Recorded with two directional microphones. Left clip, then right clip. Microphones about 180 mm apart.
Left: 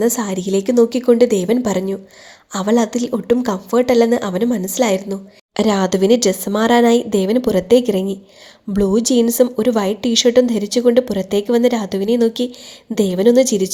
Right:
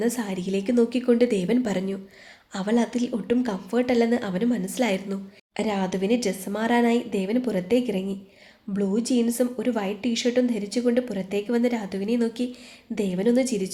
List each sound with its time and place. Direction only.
0.0 s a woman's voice: 30° left (ahead or behind)
5.5 s a woman's voice: 35° left (ahead or behind)